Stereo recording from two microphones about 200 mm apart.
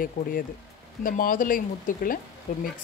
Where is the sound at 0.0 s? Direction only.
45° left (ahead or behind).